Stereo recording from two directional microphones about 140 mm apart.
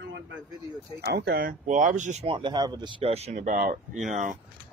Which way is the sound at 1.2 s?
80° right.